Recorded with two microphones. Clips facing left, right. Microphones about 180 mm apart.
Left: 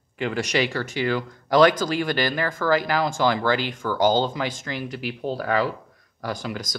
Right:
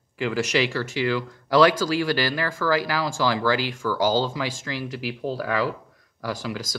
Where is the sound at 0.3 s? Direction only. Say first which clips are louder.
Right 1 dB; 5° right (ahead or behind).